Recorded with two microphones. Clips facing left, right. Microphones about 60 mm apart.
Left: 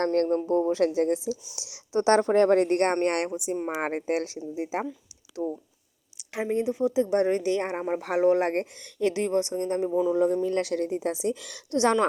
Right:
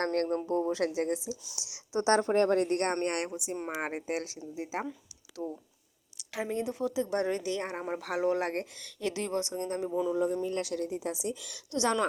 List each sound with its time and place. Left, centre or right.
0.0 s speech: right
0.4 s a woman's voice: left
2.0 s speech: left
3.0 s speech: left
3.2 s speech: left
3.5 s speech: centre
3.8 s speech: left
4.5 s speech: left
10.4 s a woman's voice: left
11.7 s speech: left